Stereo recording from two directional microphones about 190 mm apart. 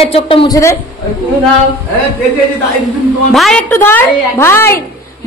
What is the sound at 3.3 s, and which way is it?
A woman's voice, centre (ahead or behind).